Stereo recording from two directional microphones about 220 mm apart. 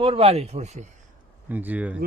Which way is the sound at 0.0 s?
25° right (ahead or behind).